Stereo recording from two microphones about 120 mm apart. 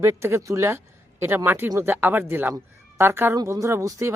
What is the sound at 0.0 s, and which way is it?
A woman's voice, 20° right (ahead or behind).